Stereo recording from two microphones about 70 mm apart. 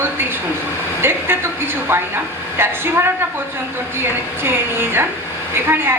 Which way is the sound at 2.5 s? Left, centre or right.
Right.